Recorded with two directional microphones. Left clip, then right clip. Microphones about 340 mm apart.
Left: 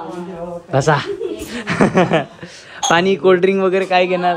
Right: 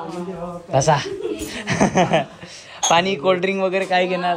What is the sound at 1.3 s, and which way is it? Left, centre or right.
Speech, centre.